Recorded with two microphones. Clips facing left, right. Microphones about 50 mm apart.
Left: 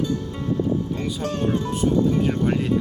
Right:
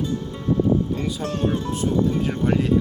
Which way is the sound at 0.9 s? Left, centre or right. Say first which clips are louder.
Right 1 dB; centre.